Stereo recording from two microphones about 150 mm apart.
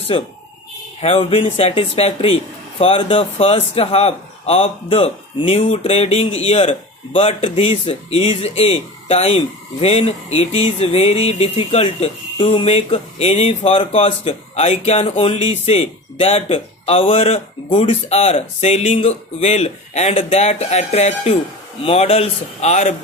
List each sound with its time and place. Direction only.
1.0 s speech: 40° left (ahead or behind)